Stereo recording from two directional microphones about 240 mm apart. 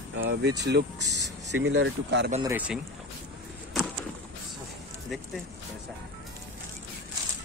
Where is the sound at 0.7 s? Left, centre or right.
Right.